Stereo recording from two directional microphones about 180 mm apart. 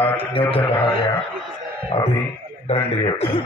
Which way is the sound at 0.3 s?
30° left (ahead or behind).